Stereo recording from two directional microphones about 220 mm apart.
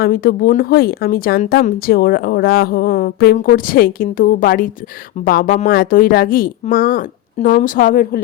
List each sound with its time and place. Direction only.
0.0 s a woman's voice: 40° left (ahead or behind)